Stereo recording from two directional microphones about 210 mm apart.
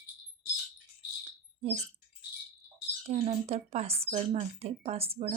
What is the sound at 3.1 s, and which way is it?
Speech, 30° right (ahead or behind).